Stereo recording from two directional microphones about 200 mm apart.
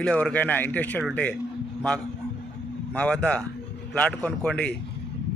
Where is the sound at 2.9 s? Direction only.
5° left (ahead or behind).